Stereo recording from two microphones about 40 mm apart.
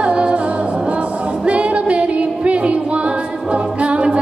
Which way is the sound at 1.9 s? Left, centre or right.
Right.